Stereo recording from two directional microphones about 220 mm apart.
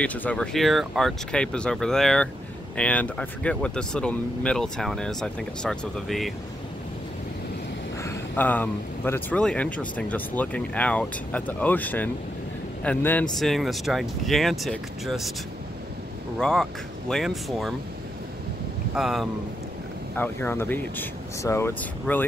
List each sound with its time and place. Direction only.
0.0 s speech: 5° left (ahead or behind)
8.0 s speech: 10° left (ahead or behind)
16.3 s speech: 5° left (ahead or behind)
18.9 s speech: centre (ahead or behind)
20.2 s speech: 10° left (ahead or behind)